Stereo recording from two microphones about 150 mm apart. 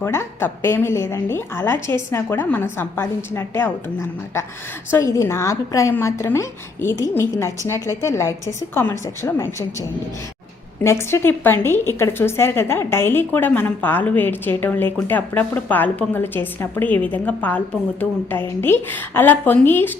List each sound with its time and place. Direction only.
0.0 s a woman's voice: 15° left (ahead or behind)
10.8 s a woman's voice: 15° left (ahead or behind)